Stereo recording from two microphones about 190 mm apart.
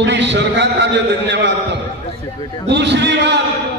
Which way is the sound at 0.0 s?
70° right (ahead or behind).